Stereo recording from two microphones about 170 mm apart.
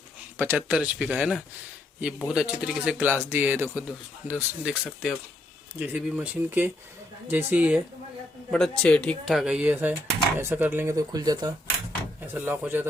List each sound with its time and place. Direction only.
0.3 s speech: 10° right (ahead or behind)
8.4 s speech: centre (ahead or behind); by 11.5 s 25° right (ahead or behind)
12.2 s speech: 10° right (ahead or behind)